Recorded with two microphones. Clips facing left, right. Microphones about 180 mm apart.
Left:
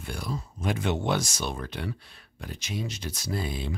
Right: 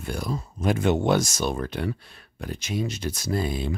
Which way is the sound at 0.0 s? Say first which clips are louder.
Right 5 dB; 45° right (ahead or behind).